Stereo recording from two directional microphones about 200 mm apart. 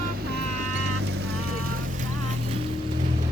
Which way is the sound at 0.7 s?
80° right.